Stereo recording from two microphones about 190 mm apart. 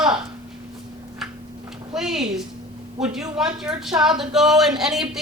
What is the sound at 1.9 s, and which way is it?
A woman's voice, centre (ahead or behind).